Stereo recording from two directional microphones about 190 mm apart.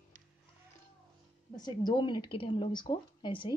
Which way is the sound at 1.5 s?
20° left (ahead or behind).